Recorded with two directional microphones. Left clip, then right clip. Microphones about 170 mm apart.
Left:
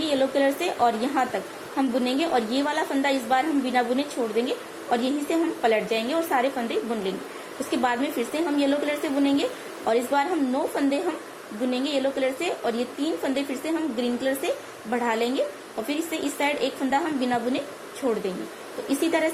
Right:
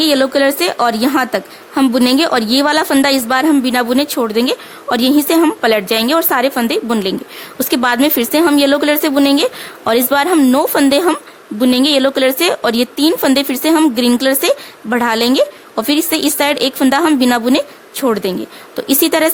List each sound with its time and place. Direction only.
0.0 s a woman's voice: 70° right (ahead or behind)
18.0 s speech: 90° right
18.9 s a woman's voice: 65° right (ahead or behind)